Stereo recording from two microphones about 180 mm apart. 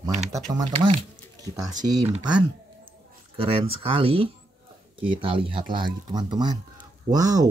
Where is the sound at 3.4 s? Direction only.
30° right (ahead or behind).